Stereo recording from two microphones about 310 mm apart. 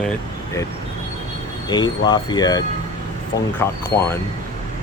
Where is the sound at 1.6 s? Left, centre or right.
Centre.